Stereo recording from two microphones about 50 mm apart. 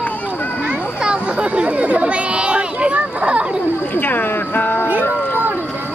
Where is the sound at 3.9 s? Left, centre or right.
Left.